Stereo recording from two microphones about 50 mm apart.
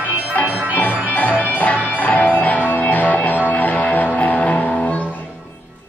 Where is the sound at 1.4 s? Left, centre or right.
Left.